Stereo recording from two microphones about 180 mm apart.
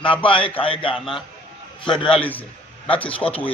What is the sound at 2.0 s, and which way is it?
Speech, 30° left (ahead or behind).